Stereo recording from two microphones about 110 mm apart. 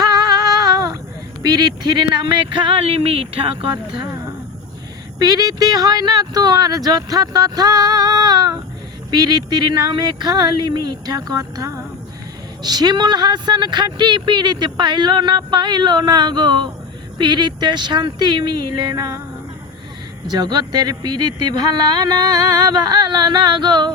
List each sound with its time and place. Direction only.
1.4 s speech: 40° right (ahead or behind); by 3.7 s 55° right (ahead or behind)
5.2 s speech: 35° right (ahead or behind)
20.2 s speech: 40° right (ahead or behind)